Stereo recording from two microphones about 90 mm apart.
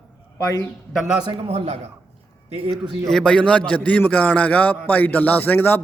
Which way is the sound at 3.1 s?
10° left (ahead or behind).